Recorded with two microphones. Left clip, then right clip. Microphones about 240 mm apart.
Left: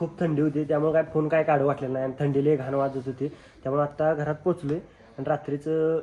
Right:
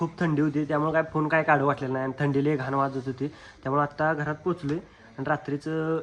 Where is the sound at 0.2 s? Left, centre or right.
Centre.